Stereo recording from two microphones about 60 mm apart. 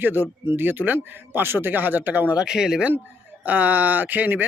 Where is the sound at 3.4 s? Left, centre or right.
Right.